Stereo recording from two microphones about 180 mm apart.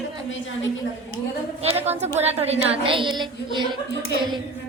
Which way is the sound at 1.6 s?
30° right (ahead or behind).